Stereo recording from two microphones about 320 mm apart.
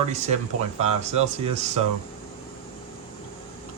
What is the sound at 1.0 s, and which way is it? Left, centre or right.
Speech, centre.